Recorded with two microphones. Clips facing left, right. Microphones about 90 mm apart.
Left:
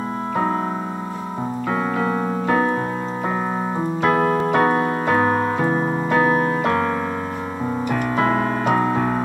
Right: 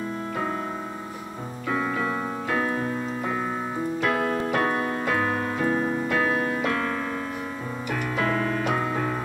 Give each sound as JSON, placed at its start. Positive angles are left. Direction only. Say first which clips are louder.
{"t": 1.7, "sound": "keyboard", "louder": "left 4 dB", "side_deg": 40}
{"t": 4.0, "sound": "keyboard", "louder": "left 8 dB", "side_deg": 40}
{"t": 7.9, "sound": "keyboard", "louder": "left 5 dB", "side_deg": 35}